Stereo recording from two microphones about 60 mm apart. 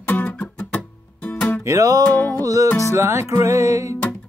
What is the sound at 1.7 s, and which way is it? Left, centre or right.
Music, right.